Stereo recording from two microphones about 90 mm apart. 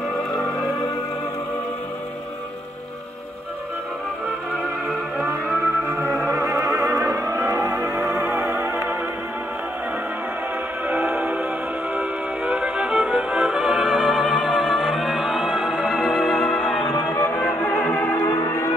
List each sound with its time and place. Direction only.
0.1 s music: centre (ahead or behind)
5.2 s music: 20° right (ahead or behind)
6.3 s music: 35° right (ahead or behind)
10.9 s music: 20° right (ahead or behind); by 18.2 s 20° left (ahead or behind)
18.2 s music: 30° left (ahead or behind)